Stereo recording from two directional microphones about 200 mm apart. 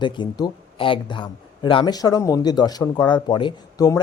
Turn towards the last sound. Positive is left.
turn(degrees=20)  # may be behind; listen again after turning